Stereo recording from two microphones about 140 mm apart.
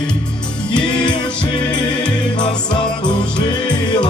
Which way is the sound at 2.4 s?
35° left (ahead or behind).